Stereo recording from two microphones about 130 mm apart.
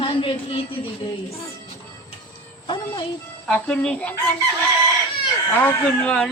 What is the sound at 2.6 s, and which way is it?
Speech, 35° left (ahead or behind).